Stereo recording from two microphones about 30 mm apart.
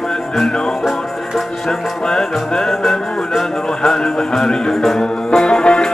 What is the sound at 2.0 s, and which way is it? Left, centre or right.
Music, left.